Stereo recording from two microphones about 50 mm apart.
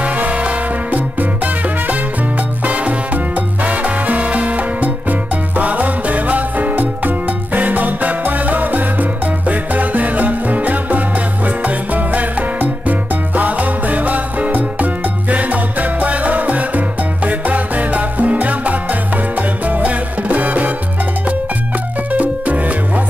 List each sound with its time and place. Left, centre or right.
0.0 s music: right
22.1 s music: right